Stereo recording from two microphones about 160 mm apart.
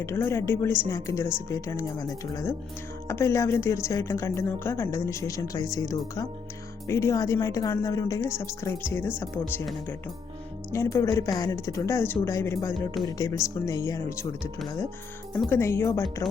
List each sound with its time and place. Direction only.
0.0 s a woman's voice: 15° left (ahead or behind)
10.7 s a woman's voice: 20° left (ahead or behind)